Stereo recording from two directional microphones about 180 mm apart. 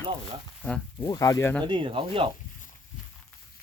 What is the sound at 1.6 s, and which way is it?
Speech, 25° right (ahead or behind).